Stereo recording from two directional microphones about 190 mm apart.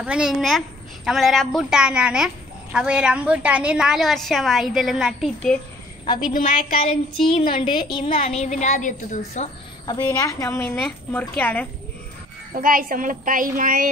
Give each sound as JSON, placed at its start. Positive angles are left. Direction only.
{"t": 0.0, "sound": "a woman's voice", "side_deg": -5}
{"t": 6.3, "sound": "a woman's voice", "side_deg": 50}
{"t": 6.8, "sound": "child singing", "side_deg": 30}
{"t": 7.5, "sound": "a woman's voice", "side_deg": 25}
{"t": 9.8, "sound": "a woman's voice", "side_deg": 20}
{"t": 12.5, "sound": "a woman's voice", "side_deg": -45}